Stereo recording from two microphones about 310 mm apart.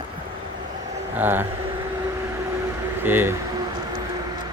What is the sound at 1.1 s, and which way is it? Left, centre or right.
Speech, centre.